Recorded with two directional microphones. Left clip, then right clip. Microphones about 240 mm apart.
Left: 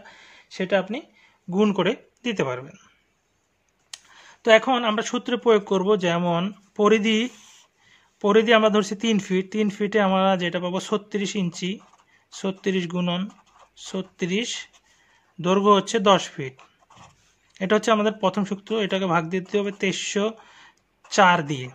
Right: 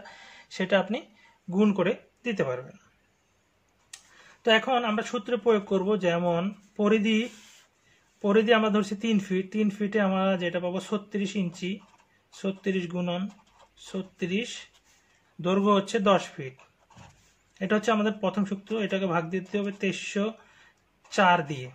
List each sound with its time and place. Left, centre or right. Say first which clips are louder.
0.0 s a sound: even; left
1.5 s speech: left 4 dB; left
3.9 s speech: left 6 dB; left
17.6 s speech: left 5 dB; left